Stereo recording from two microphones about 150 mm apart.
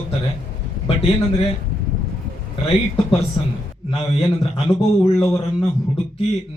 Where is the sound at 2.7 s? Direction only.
35° left (ahead or behind).